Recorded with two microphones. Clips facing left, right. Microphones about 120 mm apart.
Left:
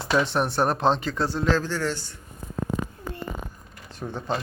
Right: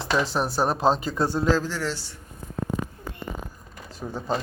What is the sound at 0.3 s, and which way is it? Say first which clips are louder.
A man's voice: left 1 dB; 5° right (ahead or behind).